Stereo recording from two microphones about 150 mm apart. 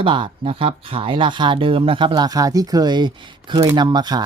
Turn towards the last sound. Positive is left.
turn(degrees=-30)  # may be behind; listen again after turning